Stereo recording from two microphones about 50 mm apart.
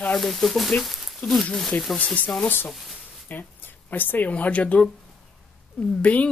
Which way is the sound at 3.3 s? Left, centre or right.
Left.